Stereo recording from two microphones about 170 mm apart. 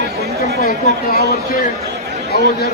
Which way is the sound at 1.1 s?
70° left (ahead or behind).